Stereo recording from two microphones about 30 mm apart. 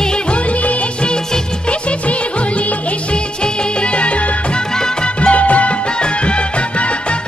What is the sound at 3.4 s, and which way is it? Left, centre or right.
Music, left.